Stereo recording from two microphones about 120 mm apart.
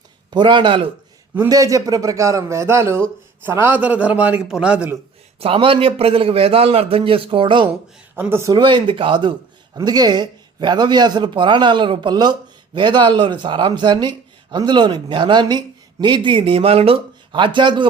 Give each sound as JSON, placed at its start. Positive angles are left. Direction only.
{"t": 0.3, "sound": "speech", "side_deg": -40}
{"t": 1.5, "sound": "a man's voice", "side_deg": -30}
{"t": 5.4, "sound": "a man's voice", "side_deg": -50}
{"t": 8.1, "sound": "a man's voice", "side_deg": -20}
{"t": 8.5, "sound": "speech", "side_deg": -40}